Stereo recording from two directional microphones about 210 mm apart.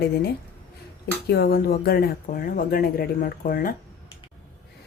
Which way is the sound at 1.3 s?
50° left (ahead or behind).